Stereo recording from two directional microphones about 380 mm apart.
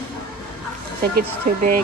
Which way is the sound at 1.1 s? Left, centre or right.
Right.